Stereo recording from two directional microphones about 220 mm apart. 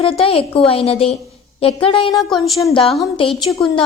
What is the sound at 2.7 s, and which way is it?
Speech, 25° left (ahead or behind).